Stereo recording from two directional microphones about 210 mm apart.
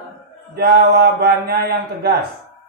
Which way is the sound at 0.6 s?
45° right (ahead or behind).